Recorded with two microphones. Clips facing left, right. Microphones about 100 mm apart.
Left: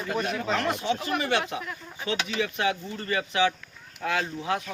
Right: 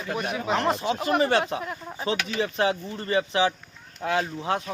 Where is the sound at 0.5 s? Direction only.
30° right (ahead or behind).